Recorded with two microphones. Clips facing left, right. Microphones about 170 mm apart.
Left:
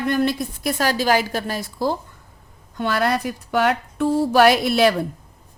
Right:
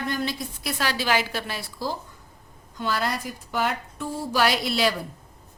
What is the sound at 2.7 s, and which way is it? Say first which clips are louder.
Speech: left 6 dB; 60° left (ahead or behind).